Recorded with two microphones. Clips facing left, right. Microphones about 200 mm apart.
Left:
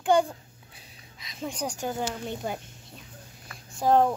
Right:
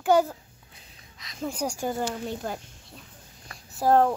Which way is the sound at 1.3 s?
5° right (ahead or behind).